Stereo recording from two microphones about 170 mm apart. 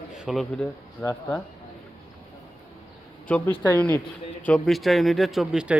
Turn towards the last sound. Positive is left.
turn(degrees=-5)  # may be behind; listen again after turning